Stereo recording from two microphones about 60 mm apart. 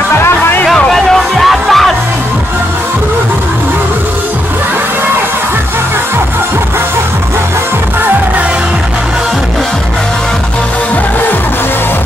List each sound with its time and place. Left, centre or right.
0.2 s music: left
0.7 s music: centre